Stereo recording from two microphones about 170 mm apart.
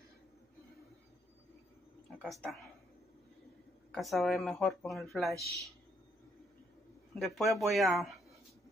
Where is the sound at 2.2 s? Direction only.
Centre (ahead or behind).